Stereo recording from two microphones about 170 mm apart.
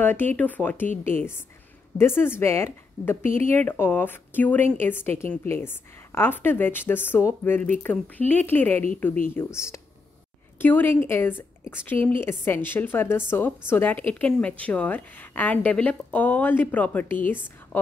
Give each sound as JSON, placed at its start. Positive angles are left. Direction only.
{"t": 0.0, "sound": "speech", "side_deg": 10}